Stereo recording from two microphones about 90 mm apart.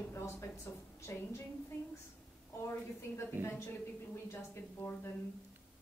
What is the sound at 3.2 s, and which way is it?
A woman's voice, 30° left (ahead or behind).